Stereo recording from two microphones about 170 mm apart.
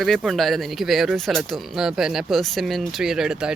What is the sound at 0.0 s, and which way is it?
Speech, centre (ahead or behind).